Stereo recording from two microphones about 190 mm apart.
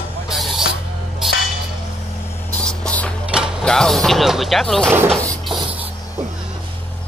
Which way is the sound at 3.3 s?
5° right (ahead or behind).